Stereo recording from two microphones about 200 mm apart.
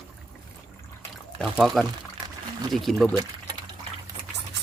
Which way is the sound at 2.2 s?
20° right (ahead or behind).